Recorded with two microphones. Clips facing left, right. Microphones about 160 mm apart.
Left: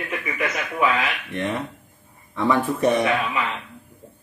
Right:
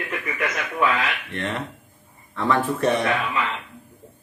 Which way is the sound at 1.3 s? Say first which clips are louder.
Left 2 dB; 10° left (ahead or behind).